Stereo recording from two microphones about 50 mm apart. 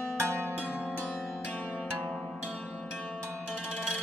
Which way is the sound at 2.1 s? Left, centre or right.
Centre.